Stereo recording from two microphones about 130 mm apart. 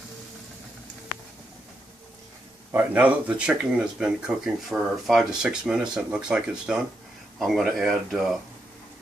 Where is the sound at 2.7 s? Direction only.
15° right (ahead or behind).